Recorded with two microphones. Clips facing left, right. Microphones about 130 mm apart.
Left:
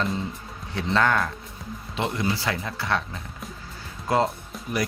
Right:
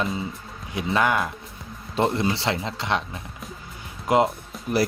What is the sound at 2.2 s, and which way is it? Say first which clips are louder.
Speech: right 2 dB; 25° right (ahead or behind).